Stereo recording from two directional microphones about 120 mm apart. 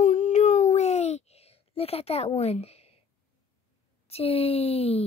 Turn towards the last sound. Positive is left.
turn(degrees=55)  # may be behind; listen again after turning